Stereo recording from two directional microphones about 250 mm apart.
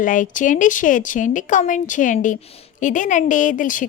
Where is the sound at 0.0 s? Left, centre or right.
Left.